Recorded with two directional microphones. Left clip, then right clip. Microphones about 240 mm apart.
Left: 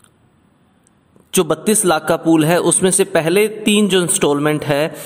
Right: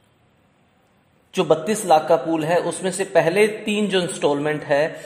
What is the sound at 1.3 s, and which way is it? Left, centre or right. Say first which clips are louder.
A man's voice: left 3 dB; left.